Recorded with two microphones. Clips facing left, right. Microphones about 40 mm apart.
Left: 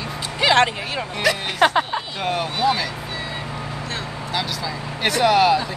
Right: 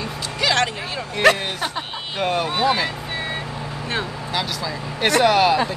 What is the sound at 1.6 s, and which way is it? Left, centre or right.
Speech, left.